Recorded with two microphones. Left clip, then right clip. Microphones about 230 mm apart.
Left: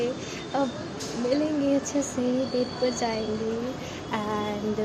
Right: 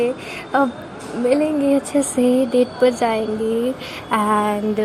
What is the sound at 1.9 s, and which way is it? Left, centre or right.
Speech, right.